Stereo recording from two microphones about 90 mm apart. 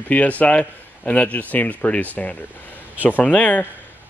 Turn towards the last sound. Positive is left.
turn(degrees=15)  # may be behind; listen again after turning